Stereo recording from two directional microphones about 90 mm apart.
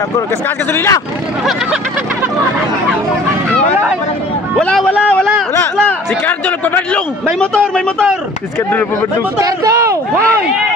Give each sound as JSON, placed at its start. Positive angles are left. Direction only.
{"t": 0.7, "sound": "speech", "side_deg": 30}
{"t": 5.9, "sound": "a man's voice", "side_deg": 15}
{"t": 9.4, "sound": "speech", "side_deg": -35}